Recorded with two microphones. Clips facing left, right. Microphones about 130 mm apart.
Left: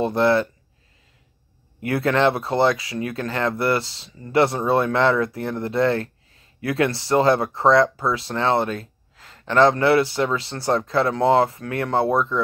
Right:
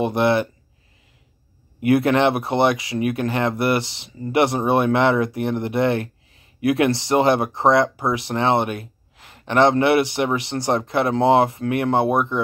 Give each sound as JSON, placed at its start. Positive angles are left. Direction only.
{"t": 0.0, "sound": "speech", "side_deg": -20}
{"t": 1.8, "sound": "speech", "side_deg": -20}